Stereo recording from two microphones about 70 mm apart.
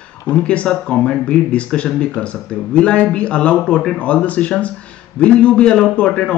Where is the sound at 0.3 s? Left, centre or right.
Centre.